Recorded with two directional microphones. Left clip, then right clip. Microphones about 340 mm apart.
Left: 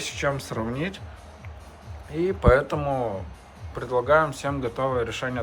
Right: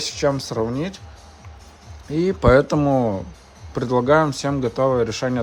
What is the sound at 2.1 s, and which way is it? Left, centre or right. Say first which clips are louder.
Speech: right 5 dB; centre.